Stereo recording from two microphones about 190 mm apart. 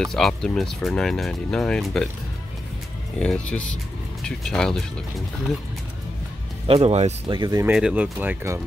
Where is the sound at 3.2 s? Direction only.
5° left (ahead or behind).